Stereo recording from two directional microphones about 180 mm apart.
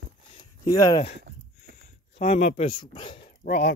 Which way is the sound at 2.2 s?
40° left (ahead or behind).